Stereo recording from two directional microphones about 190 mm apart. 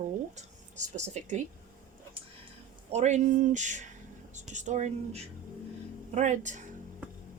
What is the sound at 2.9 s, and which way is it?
Speech, 35° right (ahead or behind).